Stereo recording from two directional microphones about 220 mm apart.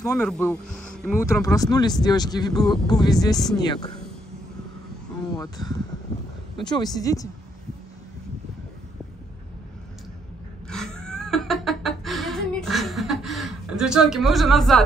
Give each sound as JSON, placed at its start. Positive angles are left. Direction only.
{"t": 0.0, "sound": "speech", "side_deg": 10}
{"t": 5.3, "sound": "speech", "side_deg": 20}
{"t": 10.7, "sound": "cat", "side_deg": 5}